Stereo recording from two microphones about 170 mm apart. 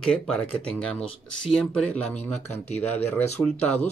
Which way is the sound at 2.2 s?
40° left (ahead or behind).